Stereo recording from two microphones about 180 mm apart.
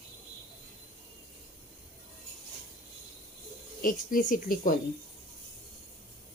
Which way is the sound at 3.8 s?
50° left (ahead or behind).